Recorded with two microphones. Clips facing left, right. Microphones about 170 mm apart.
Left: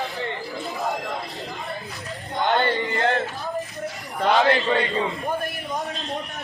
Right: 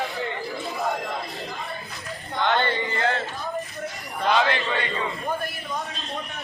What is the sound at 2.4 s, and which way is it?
Male singing, 45° left (ahead or behind).